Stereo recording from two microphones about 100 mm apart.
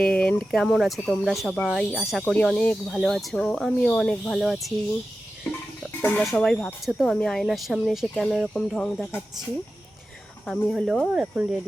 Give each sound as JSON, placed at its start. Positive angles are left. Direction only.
{"t": 0.0, "sound": "a sound", "side_deg": 10}
{"t": 0.5, "sound": "speech", "side_deg": 5}
{"t": 5.5, "sound": "music", "side_deg": 15}
{"t": 6.0, "sound": "speech", "side_deg": 15}
{"t": 6.2, "sound": "speech", "side_deg": 5}
{"t": 10.4, "sound": "speech", "side_deg": 0}
{"t": 11.0, "sound": "speech", "side_deg": -15}